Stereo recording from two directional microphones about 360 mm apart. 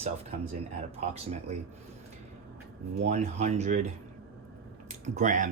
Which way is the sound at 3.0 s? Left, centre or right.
Centre.